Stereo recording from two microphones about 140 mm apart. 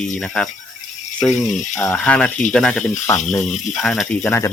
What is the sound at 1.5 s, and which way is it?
Speech, 60° left (ahead or behind).